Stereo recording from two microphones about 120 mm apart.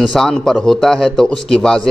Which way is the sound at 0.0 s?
5° left (ahead or behind).